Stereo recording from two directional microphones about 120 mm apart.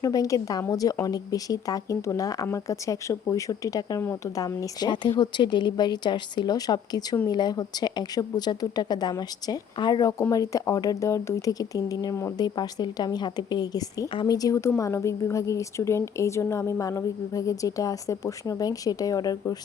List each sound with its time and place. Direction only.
0.0 s a woman's voice: 30° left (ahead or behind)